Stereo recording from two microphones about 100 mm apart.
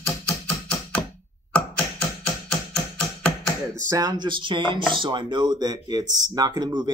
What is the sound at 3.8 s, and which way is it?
Speech, 35° right (ahead or behind).